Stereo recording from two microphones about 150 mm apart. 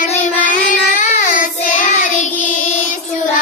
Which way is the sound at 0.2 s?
65° left (ahead or behind).